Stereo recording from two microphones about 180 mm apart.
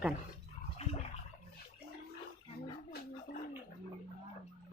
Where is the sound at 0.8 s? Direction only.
35° left (ahead or behind).